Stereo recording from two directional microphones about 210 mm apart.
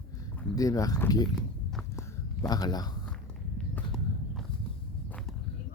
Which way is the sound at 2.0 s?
15° left (ahead or behind).